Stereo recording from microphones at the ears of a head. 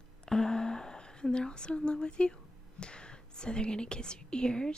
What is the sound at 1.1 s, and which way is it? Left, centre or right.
Speech, centre.